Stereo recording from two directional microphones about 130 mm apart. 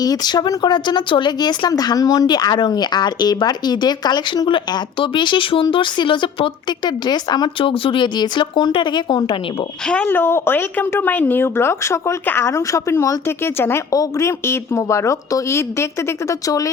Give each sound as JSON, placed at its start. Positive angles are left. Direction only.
{"t": 0.0, "sound": "speech", "side_deg": 30}
{"t": 9.8, "sound": "a woman's voice", "side_deg": 5}